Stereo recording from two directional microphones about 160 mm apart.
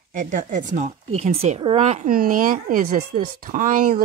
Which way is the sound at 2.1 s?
60° right (ahead or behind).